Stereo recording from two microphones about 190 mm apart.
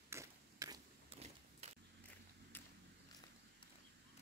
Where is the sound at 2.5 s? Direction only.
10° left (ahead or behind).